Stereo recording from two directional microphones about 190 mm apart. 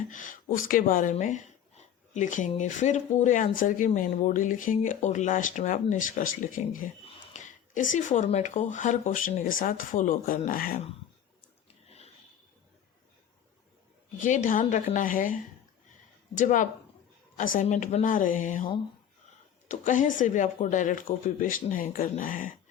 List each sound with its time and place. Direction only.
0.1 s a woman's voice: 40° left (ahead or behind)
11.9 s a sound: 35° left (ahead or behind)
14.2 s speech: 40° left (ahead or behind)
19.6 s speech: 40° left (ahead or behind)